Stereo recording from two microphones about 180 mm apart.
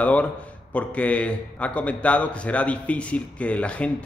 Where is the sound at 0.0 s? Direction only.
10° left (ahead or behind).